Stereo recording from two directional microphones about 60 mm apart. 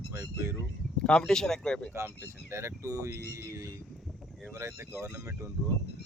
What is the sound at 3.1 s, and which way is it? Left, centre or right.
Speech, right.